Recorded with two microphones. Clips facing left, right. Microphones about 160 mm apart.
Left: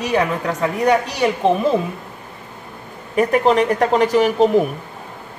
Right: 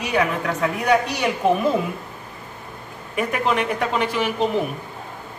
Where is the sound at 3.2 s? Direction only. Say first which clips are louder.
Left 7 dB; 35° left (ahead or behind).